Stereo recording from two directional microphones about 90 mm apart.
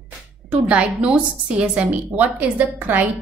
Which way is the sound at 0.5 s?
15° right (ahead or behind).